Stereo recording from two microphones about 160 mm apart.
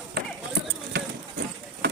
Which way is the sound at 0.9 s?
90° right.